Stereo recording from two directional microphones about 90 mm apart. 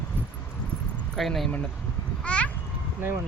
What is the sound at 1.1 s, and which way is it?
Speech, centre (ahead or behind).